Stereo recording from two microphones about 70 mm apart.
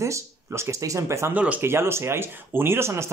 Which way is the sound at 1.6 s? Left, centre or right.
Right.